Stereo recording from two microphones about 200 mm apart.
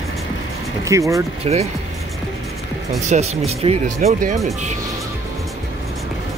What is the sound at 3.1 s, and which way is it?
Speech, 35° right (ahead or behind).